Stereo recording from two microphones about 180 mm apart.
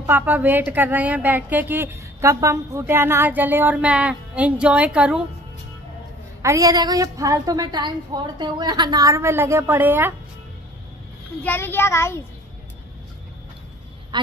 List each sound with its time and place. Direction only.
0.0 s a woman's voice: 10° right (ahead or behind)
6.4 s a woman's voice: 20° right (ahead or behind)
11.4 s a child's voice: 10° left (ahead or behind)
14.1 s quack: 25° right (ahead or behind)